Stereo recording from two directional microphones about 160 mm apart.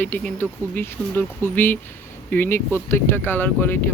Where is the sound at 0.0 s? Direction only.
10° left (ahead or behind).